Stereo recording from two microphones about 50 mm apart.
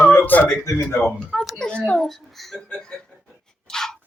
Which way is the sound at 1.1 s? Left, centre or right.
Centre.